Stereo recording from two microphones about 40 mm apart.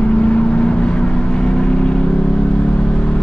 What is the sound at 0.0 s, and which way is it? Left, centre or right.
Vehicle, left.